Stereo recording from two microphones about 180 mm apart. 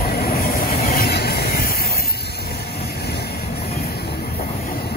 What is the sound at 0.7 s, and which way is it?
Train, 35° left (ahead or behind).